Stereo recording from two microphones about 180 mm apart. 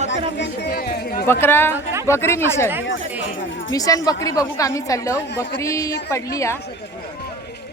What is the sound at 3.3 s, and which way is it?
Chatter, 90° left.